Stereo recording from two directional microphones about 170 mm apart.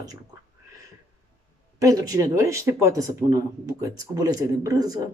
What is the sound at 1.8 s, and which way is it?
Speech, 20° right (ahead or behind).